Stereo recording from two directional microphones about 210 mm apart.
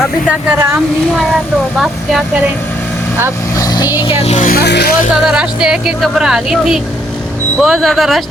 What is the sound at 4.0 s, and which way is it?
Speech, 25° left (ahead or behind).